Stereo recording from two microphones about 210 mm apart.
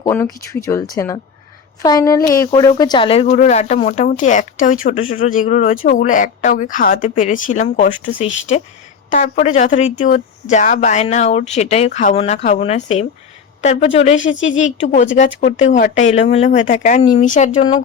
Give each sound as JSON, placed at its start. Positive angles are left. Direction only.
{"t": 0.0, "sound": "speech", "side_deg": 10}
{"t": 14.3, "sound": "a woman's voice", "side_deg": 65}
{"t": 14.5, "sound": "speech", "side_deg": 35}